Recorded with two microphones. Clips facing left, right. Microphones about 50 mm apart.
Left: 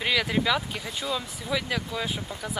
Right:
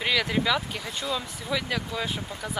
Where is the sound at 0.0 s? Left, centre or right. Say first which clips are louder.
Even; centre.